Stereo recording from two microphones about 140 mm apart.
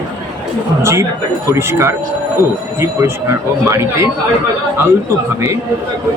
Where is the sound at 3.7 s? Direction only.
20° right (ahead or behind).